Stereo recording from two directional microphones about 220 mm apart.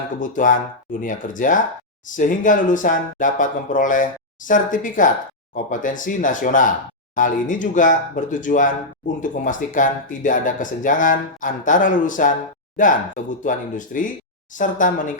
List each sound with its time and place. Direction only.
0.2 s speech: 35° left (ahead or behind)